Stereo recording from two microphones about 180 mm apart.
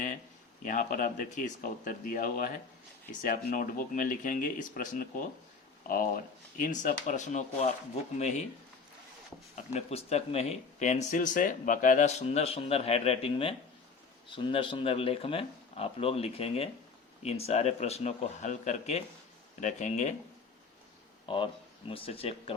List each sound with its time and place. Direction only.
0.6 s speech: 45° left (ahead or behind)
9.6 s speech: 35° left (ahead or behind)
21.2 s speech: 30° left (ahead or behind)